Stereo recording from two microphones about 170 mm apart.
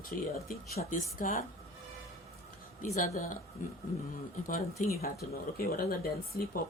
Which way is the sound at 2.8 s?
45° left (ahead or behind).